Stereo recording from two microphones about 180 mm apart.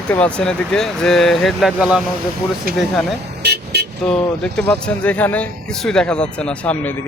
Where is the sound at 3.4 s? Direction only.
65° right (ahead or behind).